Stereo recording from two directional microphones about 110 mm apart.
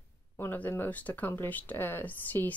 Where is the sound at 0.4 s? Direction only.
20° left (ahead or behind).